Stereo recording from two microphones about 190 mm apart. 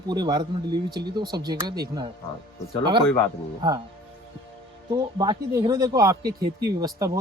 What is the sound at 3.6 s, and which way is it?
Speech, 20° right (ahead or behind).